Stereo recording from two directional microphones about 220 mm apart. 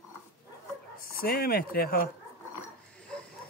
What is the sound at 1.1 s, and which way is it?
Speech, 45° left (ahead or behind).